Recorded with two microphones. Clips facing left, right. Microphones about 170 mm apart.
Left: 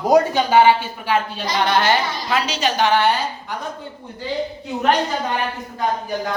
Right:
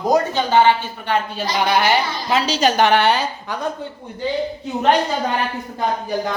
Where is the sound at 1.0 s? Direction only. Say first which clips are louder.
Right 1 dB; 5° right (ahead or behind).